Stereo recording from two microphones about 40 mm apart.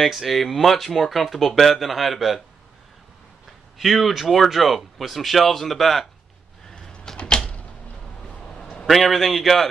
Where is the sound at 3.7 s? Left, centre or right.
Centre.